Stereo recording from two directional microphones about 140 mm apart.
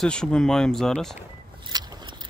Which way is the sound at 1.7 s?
30° right (ahead or behind).